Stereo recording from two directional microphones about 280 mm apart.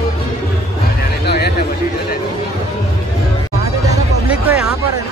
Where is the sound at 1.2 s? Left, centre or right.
Left.